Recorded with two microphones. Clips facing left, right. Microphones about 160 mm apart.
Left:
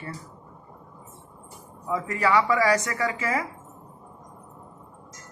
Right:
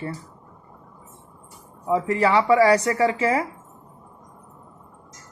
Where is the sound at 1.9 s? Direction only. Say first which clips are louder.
Right 4 dB; 30° right (ahead or behind).